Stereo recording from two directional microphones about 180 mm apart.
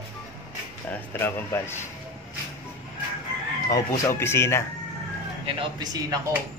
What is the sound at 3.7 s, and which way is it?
Speech, 15° left (ahead or behind).